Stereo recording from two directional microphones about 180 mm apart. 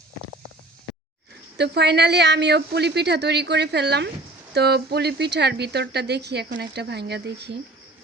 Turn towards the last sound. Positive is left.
turn(degrees=-65)  # may be behind; listen again after turning